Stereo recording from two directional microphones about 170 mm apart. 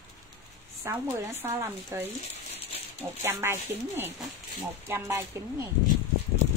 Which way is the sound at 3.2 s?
15° right (ahead or behind).